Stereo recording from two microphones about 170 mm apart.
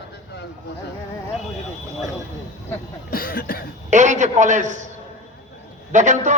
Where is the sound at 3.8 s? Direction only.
45° right (ahead or behind).